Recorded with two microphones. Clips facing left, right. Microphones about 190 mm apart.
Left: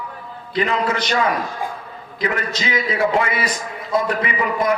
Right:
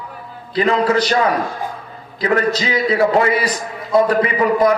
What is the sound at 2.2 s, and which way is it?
A man's voice, 35° right (ahead or behind).